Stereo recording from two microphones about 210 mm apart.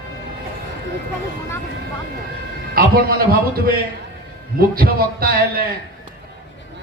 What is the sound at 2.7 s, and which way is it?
Speech, 45° right (ahead or behind).